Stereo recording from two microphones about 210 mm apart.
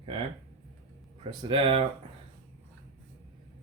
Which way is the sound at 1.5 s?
25° right (ahead or behind).